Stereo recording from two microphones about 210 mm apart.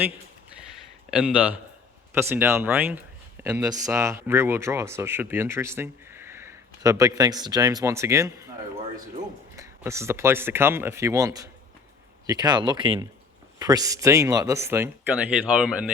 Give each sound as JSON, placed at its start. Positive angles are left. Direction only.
{"t": 1.1, "sound": "speech", "side_deg": -5}
{"t": 3.4, "sound": "a sound", "side_deg": -10}
{"t": 3.8, "sound": "speech", "side_deg": -15}
{"t": 9.6, "sound": "speech", "side_deg": -15}